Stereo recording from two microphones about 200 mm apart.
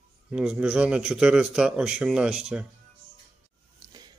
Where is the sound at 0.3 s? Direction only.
5° right (ahead or behind).